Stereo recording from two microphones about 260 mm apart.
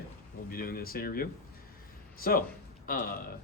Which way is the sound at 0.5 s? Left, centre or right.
Left.